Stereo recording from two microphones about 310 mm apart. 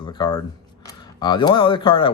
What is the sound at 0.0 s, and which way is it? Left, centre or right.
Speech, centre.